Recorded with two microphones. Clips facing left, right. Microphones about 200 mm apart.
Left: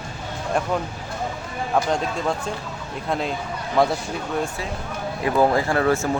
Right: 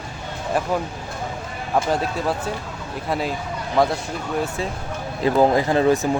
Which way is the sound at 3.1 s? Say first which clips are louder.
Right 1 dB; 5° right (ahead or behind).